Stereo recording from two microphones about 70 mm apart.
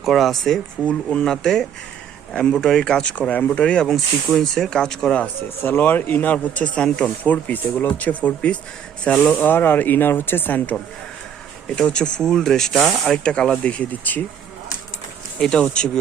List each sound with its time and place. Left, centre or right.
0.0 s speech: centre
3.8 s speech: centre
5.2 s speech: left; by 7.1 s centre
7.3 s speech: left
9.3 s speech: left
11.7 s speech: centre
13.2 s speech: centre
15.4 s speech: centre